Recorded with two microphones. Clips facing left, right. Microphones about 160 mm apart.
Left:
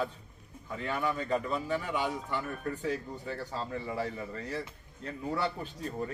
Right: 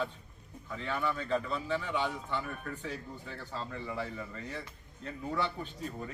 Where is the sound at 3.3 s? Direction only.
40° left (ahead or behind).